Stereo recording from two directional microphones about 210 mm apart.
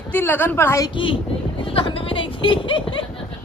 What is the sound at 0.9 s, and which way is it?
Speech, 25° left (ahead or behind).